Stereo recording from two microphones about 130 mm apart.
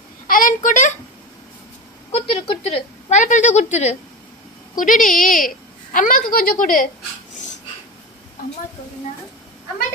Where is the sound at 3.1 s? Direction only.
70° left (ahead or behind).